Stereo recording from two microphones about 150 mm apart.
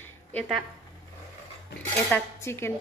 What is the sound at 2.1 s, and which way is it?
Speech, 15° left (ahead or behind).